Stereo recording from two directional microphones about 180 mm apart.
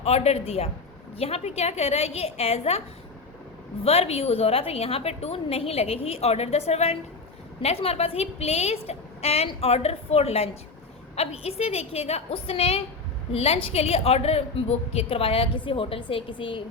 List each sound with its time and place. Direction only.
0.0 s a woman's voice: 35° left (ahead or behind)
3.8 s a woman's voice: 35° left (ahead or behind)